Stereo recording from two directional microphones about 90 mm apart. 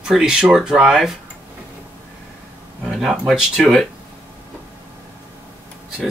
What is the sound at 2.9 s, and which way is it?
Speech, 5° right (ahead or behind).